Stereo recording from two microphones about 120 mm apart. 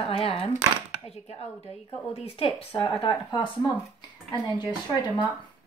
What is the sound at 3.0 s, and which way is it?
Speech, 40° left (ahead or behind).